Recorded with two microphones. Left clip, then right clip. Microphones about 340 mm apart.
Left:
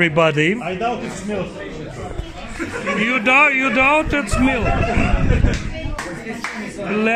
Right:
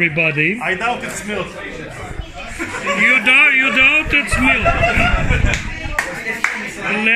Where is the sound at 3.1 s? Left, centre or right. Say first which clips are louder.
Right 3 dB; centre.